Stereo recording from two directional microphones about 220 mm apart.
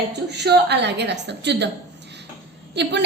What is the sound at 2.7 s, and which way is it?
Speech, 50° right (ahead or behind).